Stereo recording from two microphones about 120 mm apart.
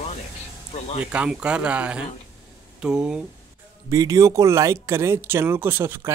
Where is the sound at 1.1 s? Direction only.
10° right (ahead or behind).